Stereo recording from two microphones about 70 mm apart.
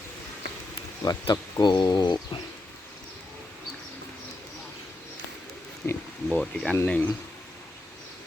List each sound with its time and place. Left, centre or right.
1.0 s speech: left
5.8 s a sound: left
6.3 s speech: centre